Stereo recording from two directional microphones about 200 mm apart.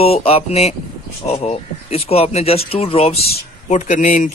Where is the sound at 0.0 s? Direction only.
30° left (ahead or behind).